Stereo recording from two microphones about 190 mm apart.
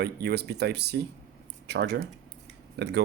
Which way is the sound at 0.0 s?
60° right (ahead or behind).